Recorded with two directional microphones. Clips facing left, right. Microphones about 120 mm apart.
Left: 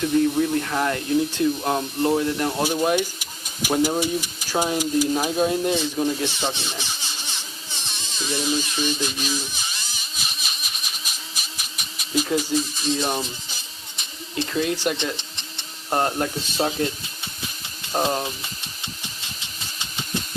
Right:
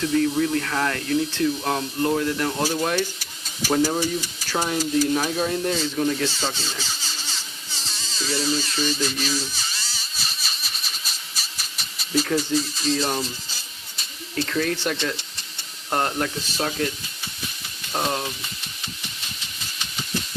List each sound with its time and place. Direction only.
0.0 s speech: 20° left (ahead or behind)
7.7 s electric toothbrush: 20° left (ahead or behind)
11.5 s a sound: 15° left (ahead or behind)
14.3 s speech: 15° left (ahead or behind)